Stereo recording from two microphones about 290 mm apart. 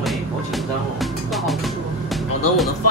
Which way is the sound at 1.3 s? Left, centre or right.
Centre.